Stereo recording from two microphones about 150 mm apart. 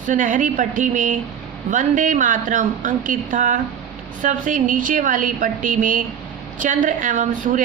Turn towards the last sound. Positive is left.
turn(degrees=-60)  # may be behind; listen again after turning